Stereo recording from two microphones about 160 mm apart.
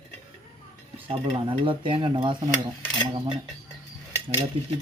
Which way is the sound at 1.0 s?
35° right (ahead or behind).